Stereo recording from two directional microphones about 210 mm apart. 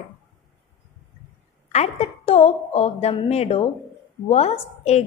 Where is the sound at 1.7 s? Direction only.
30° left (ahead or behind).